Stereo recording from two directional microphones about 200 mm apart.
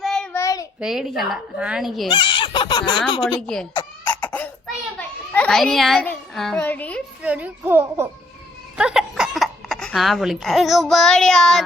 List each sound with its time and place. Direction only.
0.0 s child singing: centre (ahead or behind)
0.3 s child singing: 15° left (ahead or behind)
0.8 s a woman's voice: 5° right (ahead or behind)
2.0 s speech: 25° left (ahead or behind)
3.4 s a woman's voice: 5° left (ahead or behind)
4.0 s a sound: 10° left (ahead or behind)
7.2 s a child's voice: 5° right (ahead or behind)